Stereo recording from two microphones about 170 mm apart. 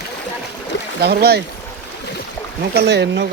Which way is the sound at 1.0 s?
70° right (ahead or behind).